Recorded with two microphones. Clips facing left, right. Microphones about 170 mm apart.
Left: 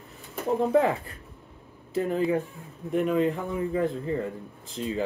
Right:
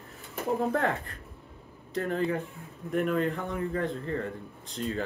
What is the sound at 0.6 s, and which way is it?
Speech, centre (ahead or behind).